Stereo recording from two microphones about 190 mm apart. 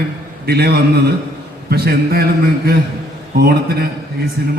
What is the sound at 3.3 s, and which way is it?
A man's voice, 55° right (ahead or behind).